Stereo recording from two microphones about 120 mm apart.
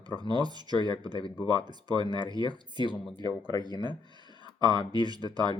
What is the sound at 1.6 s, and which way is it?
Speech, 35° right (ahead or behind).